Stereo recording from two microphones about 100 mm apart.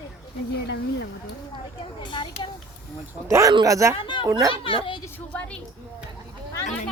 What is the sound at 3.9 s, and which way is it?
Speech, 55° left (ahead or behind).